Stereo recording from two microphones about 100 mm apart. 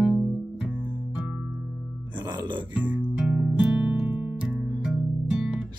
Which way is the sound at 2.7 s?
15° right (ahead or behind).